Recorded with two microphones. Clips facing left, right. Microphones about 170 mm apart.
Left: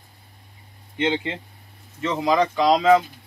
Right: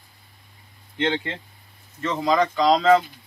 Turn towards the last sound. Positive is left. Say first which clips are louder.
# even
turn(degrees=10)  # may be behind; listen again after turning